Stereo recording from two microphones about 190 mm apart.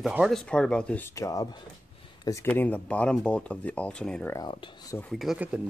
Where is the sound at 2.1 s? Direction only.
20° left (ahead or behind).